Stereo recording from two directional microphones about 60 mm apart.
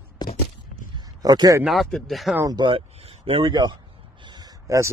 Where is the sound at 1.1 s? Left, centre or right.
Right.